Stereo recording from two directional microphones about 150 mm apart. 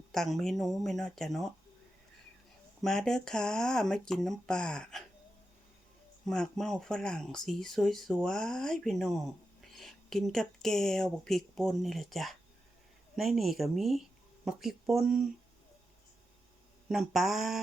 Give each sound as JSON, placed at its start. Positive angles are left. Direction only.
{"t": 0.1, "sound": "speech", "side_deg": 0}
{"t": 2.8, "sound": "speech", "side_deg": 5}
{"t": 6.2, "sound": "speech", "side_deg": 5}
{"t": 16.9, "sound": "speech", "side_deg": -5}